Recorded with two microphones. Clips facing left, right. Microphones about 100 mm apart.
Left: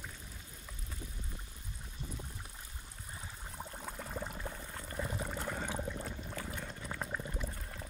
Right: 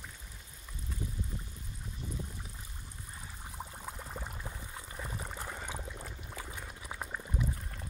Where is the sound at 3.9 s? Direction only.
5° right (ahead or behind).